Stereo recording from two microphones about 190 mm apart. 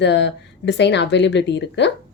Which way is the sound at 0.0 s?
70° left (ahead or behind).